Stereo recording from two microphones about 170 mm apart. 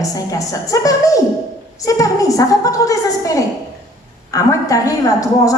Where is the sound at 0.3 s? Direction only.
20° left (ahead or behind).